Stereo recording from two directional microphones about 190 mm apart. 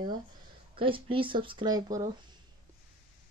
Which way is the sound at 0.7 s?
25° right (ahead or behind).